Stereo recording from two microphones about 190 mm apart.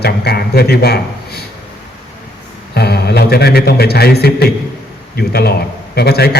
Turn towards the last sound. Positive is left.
turn(degrees=55)  # may be behind; listen again after turning